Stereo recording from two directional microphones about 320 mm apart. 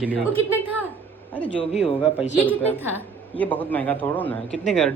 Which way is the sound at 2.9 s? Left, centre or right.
Centre.